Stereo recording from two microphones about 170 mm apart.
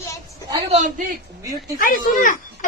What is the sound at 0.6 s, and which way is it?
Speech, 45° right (ahead or behind).